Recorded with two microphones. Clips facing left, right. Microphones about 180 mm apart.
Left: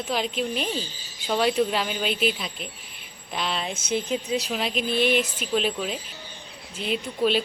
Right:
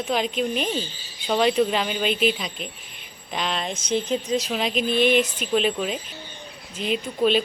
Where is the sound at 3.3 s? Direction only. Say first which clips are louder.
Right 2 dB; 5° left (ahead or behind).